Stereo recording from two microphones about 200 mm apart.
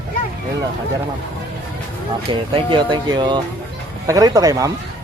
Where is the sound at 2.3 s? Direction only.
25° right (ahead or behind).